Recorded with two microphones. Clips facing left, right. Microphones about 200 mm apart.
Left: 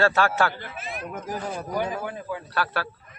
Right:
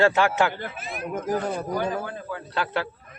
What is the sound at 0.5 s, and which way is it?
Speech, 55° right (ahead or behind).